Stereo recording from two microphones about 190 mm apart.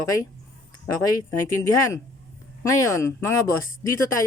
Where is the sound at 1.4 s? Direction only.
15° left (ahead or behind).